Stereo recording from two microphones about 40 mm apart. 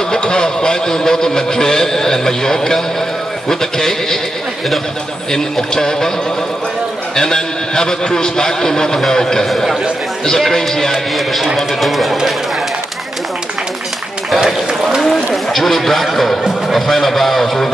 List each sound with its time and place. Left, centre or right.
0.1 s a man's voice: centre
5.3 s a man's voice: centre
7.2 s a man's voice: centre
10.5 s a man's voice: centre
14.4 s run: centre
15.0 s a man's voice: centre